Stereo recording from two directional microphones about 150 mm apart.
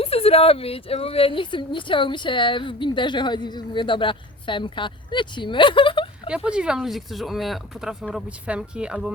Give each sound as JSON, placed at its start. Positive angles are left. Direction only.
{"t": 0.0, "sound": "speech", "side_deg": 40}
{"t": 6.2, "sound": "speech", "side_deg": -5}